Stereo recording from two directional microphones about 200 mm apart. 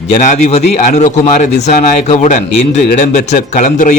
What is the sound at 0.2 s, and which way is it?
Speech, 35° left (ahead or behind).